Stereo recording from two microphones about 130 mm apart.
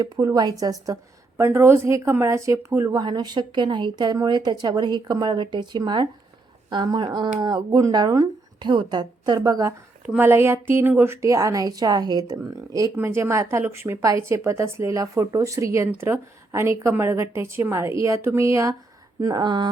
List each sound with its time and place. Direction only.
0.0 s a woman's voice: 25° right (ahead or behind)
10.1 s a woman's voice: 15° right (ahead or behind)
19.2 s a woman's voice: 35° right (ahead or behind)